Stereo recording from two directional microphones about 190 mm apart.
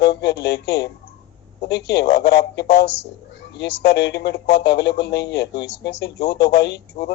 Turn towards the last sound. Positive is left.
turn(degrees=60)  # may be behind; listen again after turning